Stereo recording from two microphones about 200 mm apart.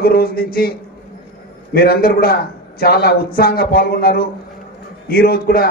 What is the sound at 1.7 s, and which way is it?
A man's voice, 50° left (ahead or behind).